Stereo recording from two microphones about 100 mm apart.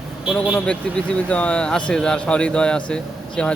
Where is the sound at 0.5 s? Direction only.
10° left (ahead or behind).